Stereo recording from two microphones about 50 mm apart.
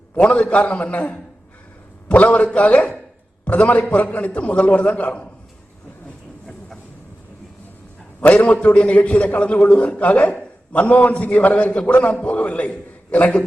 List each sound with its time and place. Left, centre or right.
0.2 s a man's voice: left
8.2 s a man's voice: left
8.6 s a man's voice: left